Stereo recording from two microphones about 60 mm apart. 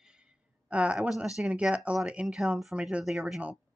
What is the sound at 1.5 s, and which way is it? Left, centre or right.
Speech, centre.